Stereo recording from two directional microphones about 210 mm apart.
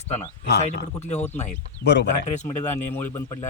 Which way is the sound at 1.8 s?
50° left (ahead or behind).